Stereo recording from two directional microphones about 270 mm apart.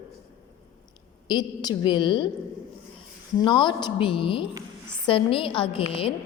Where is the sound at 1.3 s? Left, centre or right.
Centre.